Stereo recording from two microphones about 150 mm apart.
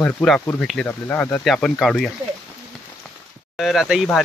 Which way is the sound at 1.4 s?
Centre (ahead or behind).